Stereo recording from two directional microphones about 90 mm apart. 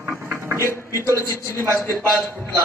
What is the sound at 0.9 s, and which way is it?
Speech, 30° right (ahead or behind).